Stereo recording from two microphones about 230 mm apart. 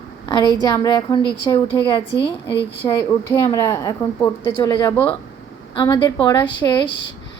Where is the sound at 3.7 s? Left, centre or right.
Centre.